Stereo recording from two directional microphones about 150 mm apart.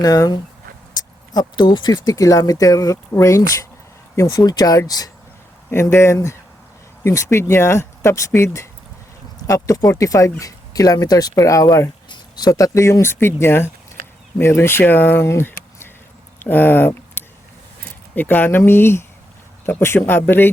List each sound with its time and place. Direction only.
0.0 s speech: 25° left (ahead or behind)